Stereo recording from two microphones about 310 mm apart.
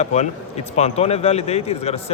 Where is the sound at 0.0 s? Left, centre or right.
Left.